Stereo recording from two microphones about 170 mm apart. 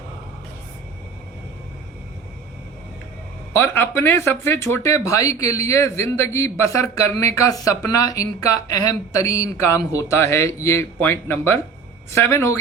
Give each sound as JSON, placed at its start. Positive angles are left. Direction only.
{"t": 3.5, "sound": "speech", "side_deg": 10}